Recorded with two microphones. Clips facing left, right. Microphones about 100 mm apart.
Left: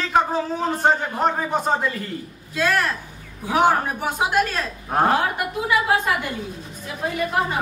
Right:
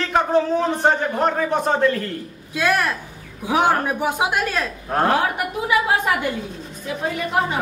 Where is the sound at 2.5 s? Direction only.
15° right (ahead or behind).